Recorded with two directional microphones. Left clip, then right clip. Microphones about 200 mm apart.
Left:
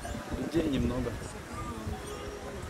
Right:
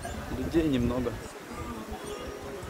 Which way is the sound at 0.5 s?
20° right (ahead or behind).